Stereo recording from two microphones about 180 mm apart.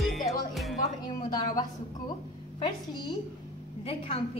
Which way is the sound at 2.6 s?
25° left (ahead or behind).